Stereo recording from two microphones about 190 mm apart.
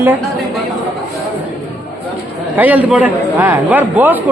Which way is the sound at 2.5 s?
10° right (ahead or behind).